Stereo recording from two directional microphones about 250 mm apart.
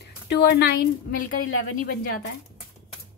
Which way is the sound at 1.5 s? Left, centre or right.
Left.